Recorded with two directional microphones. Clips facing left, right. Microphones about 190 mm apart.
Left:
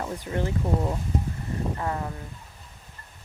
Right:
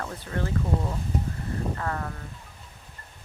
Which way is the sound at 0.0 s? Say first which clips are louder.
Left 3 dB; 15° left (ahead or behind).